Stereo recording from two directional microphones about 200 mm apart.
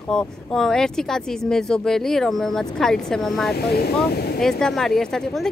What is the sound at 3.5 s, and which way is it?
Speech, 50° left (ahead or behind).